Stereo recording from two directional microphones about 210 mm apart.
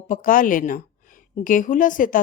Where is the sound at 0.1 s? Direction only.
40° left (ahead or behind).